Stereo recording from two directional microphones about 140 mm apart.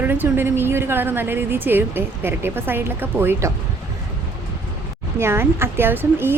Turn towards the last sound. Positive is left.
turn(degrees=-15)  # may be behind; listen again after turning